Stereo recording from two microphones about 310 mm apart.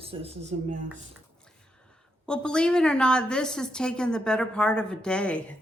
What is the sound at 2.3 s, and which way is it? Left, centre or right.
A woman's voice, centre.